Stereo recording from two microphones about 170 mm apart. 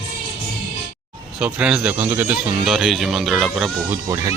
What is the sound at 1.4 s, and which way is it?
Speech, 5° right (ahead or behind).